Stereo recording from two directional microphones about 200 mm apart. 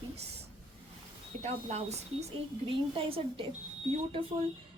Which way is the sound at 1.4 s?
35° right (ahead or behind).